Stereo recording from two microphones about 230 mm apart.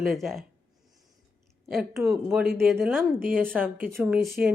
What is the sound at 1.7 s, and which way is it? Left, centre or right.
A woman's voice, centre.